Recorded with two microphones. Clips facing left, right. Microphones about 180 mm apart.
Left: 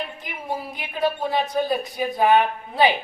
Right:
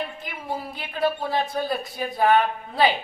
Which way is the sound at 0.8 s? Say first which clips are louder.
Left 1 dB; 15° left (ahead or behind).